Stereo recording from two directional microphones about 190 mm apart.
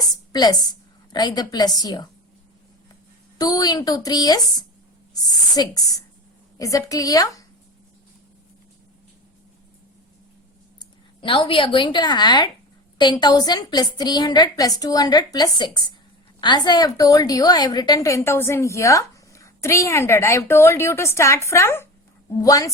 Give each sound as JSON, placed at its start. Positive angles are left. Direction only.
{"t": 1.1, "sound": "a woman's voice", "side_deg": 20}
{"t": 3.3, "sound": "a woman's voice", "side_deg": 20}
{"t": 5.5, "sound": "a woman's voice", "side_deg": 20}
{"t": 10.8, "sound": "a woman's voice", "side_deg": 25}